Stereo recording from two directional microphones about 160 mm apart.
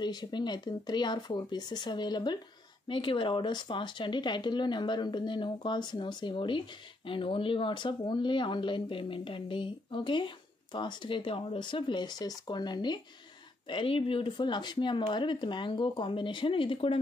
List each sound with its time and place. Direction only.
0.0 s speech: 25° left (ahead or behind)